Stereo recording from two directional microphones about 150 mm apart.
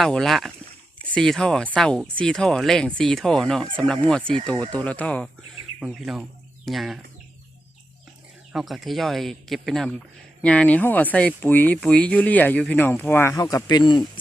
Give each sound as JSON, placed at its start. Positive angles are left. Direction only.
{"t": 0.0, "sound": "speech", "side_deg": 0}
{"t": 5.8, "sound": "speech", "side_deg": -5}
{"t": 8.5, "sound": "speech", "side_deg": 0}